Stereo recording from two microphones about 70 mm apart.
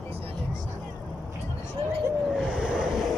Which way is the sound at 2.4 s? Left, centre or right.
Centre.